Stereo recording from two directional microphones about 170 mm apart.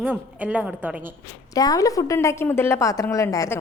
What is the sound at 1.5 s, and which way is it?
A woman's voice, 20° left (ahead or behind).